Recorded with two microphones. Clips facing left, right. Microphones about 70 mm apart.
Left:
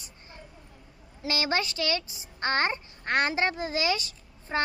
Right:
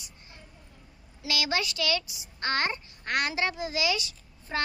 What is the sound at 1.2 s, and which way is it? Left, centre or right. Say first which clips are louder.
A child's voice: left 2 dB; left.